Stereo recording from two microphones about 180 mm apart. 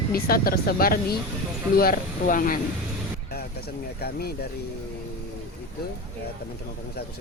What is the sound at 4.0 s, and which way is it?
Speech, 60° left (ahead or behind).